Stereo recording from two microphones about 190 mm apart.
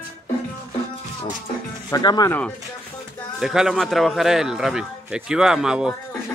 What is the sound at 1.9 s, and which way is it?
Speech, 20° left (ahead or behind).